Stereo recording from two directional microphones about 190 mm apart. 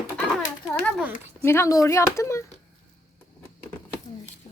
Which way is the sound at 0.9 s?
10° right (ahead or behind).